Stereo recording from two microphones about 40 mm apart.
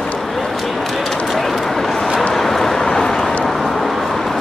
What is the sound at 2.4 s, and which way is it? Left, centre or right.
Vehicle, centre.